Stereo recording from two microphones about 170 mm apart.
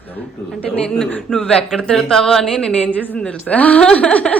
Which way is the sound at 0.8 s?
5° left (ahead or behind).